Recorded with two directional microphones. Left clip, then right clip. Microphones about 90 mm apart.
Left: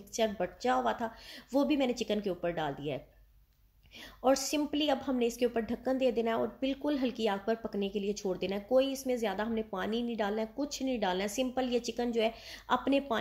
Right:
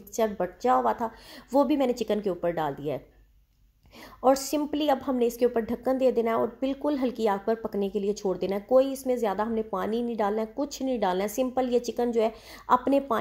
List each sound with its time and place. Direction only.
0.1 s a woman's voice: 45° right (ahead or behind)
4.2 s a woman's voice: 45° right (ahead or behind)